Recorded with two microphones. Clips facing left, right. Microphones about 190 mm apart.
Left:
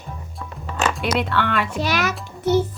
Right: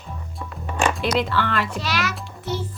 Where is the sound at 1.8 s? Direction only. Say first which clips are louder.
Left 3 dB; 50° left (ahead or behind).